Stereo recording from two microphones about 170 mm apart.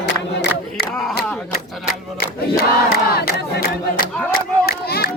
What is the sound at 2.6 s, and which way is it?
Crowd, 65° left (ahead or behind).